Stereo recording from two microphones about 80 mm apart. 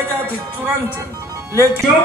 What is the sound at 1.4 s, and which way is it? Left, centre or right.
Music, right.